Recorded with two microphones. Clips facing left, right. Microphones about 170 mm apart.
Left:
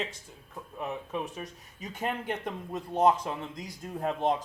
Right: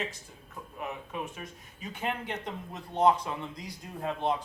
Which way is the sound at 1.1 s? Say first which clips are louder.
Left 3 dB; 35° left (ahead or behind).